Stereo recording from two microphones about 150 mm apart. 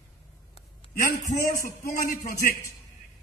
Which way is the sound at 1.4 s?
65° left (ahead or behind).